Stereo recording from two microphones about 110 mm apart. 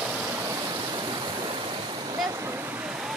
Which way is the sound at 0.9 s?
40° right (ahead or behind).